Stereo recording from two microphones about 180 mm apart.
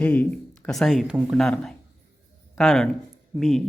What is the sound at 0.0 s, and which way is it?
Speech, 10° left (ahead or behind).